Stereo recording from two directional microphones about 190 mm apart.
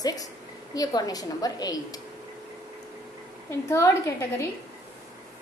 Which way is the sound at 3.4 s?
15° left (ahead or behind).